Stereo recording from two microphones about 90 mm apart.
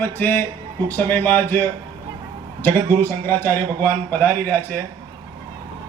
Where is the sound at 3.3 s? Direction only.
20° left (ahead or behind).